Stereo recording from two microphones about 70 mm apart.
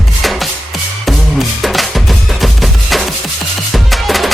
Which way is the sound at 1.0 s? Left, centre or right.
Centre.